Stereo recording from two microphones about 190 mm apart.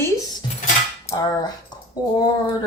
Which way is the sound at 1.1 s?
20° left (ahead or behind).